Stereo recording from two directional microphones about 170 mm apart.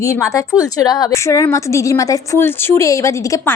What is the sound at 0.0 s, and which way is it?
A woman's voice, 15° left (ahead or behind).